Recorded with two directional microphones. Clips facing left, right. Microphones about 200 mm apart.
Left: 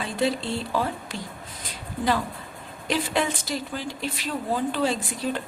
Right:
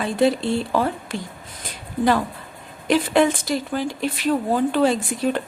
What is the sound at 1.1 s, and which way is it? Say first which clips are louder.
Speech: right 6 dB; 55° right (ahead or behind).